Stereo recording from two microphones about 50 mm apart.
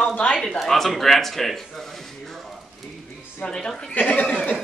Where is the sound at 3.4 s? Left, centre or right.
Centre.